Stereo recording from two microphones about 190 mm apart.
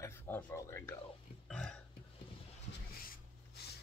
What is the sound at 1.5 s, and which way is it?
Burping, 5° left (ahead or behind).